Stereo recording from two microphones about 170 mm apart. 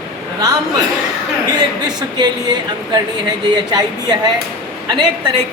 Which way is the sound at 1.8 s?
25° right (ahead or behind).